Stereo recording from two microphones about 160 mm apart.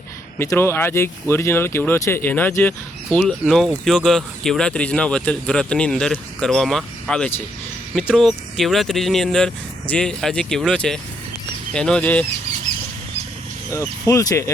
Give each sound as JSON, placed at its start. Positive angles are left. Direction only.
{"t": 0.3, "sound": "speech", "side_deg": 15}
{"t": 13.7, "sound": "speech", "side_deg": 20}